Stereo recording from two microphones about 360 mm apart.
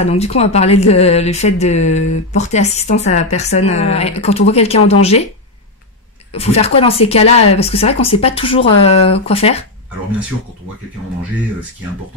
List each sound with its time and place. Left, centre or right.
0.0 s speech: centre
6.3 s speech: centre